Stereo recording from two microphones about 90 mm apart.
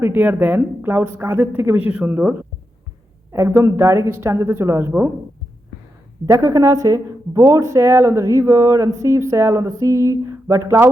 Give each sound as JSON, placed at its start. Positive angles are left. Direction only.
{"t": 0.0, "sound": "speech", "side_deg": -20}
{"t": 3.3, "sound": "speech", "side_deg": -30}
{"t": 6.2, "sound": "speech", "side_deg": -40}